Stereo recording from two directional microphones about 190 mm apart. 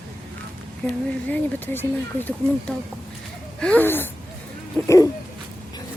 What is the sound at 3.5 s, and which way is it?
Speech, 5° left (ahead or behind).